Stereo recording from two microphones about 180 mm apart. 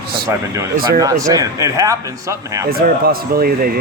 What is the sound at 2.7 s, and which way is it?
Speech, 55° right (ahead or behind).